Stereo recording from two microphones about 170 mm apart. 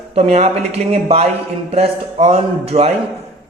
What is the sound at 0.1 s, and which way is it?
Speech, 40° right (ahead or behind).